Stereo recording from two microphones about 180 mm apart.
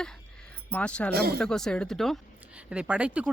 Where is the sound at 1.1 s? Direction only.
60° right (ahead or behind).